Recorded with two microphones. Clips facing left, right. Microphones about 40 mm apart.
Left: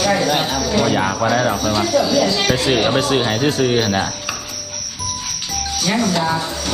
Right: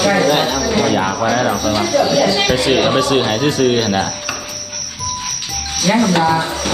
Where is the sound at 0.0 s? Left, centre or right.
Right.